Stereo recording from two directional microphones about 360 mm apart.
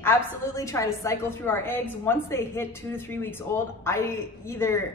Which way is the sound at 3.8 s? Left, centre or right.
Centre.